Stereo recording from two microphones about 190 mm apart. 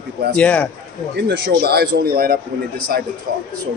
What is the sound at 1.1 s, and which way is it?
A man's voice, 60° right (ahead or behind).